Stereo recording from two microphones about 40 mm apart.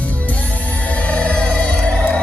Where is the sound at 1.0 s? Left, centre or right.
Left.